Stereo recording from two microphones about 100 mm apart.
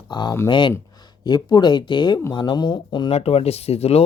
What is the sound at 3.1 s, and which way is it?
Speech, 90° left.